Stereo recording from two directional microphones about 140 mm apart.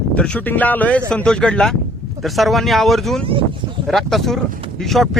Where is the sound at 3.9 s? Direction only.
Centre (ahead or behind).